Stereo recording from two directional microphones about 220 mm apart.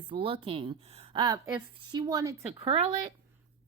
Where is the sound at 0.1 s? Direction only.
25° right (ahead or behind).